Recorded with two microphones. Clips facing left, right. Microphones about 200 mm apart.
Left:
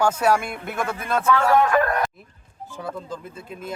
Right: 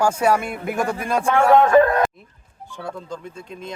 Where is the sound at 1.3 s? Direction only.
25° right (ahead or behind).